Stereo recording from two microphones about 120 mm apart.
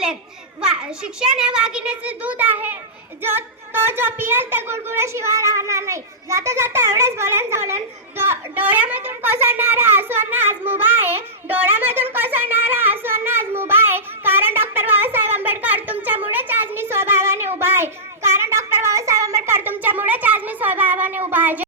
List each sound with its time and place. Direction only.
0.6 s a child's voice: 5° right (ahead or behind)
12.1 s a sound: 15° right (ahead or behind)
17.5 s child singing: 20° right (ahead or behind)